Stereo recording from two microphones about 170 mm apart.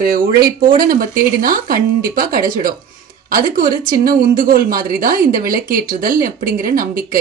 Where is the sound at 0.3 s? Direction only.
60° right (ahead or behind).